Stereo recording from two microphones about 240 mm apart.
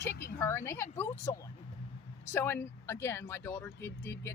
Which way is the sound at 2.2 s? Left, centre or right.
Centre.